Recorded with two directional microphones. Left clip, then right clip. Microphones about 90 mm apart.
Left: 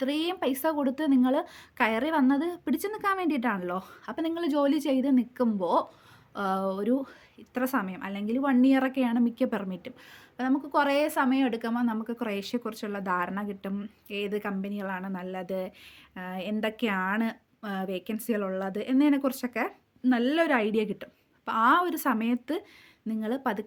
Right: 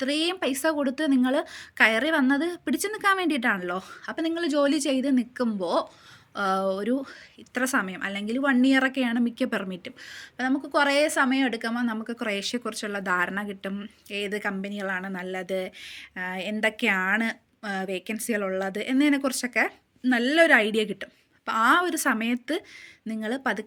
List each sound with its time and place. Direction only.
0.0 s speech: 40° left (ahead or behind)
6.3 s speech: 35° left (ahead or behind)
10.1 s speech: 45° left (ahead or behind)
23.0 s speech: 40° left (ahead or behind)